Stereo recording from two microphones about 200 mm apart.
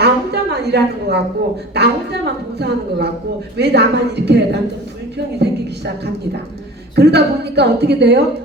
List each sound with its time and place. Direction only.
0.0 s a sound: 55° right (ahead or behind)
1.7 s a woman's voice: 55° right (ahead or behind)
6.9 s a woman's voice: 55° right (ahead or behind)